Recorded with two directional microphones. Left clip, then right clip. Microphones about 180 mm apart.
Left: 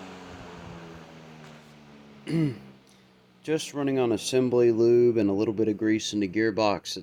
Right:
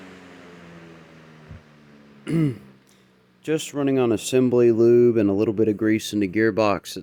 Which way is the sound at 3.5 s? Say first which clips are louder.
Right 4 dB; 45° right (ahead or behind).